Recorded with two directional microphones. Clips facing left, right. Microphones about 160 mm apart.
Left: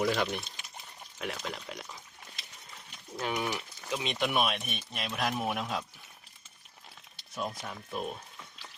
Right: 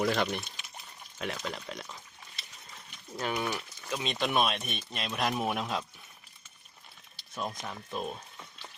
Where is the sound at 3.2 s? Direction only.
10° left (ahead or behind).